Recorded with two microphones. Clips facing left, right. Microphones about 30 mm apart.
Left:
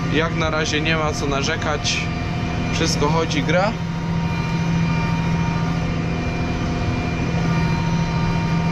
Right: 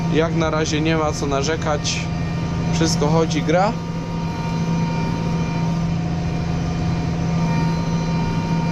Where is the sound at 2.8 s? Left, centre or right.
Centre.